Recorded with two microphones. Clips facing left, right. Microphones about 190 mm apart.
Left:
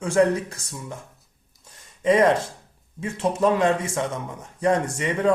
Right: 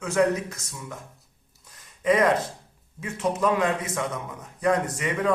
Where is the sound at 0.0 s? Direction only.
30° left (ahead or behind).